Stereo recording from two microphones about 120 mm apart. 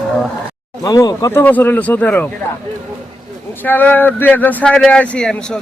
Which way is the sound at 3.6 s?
15° left (ahead or behind).